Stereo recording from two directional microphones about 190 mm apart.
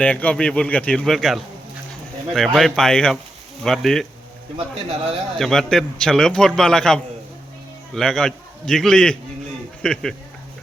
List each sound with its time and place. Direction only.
0.0 s a man's voice: 5° left (ahead or behind)
4.5 s a man's voice: 30° right (ahead or behind)
5.4 s a man's voice: centre (ahead or behind)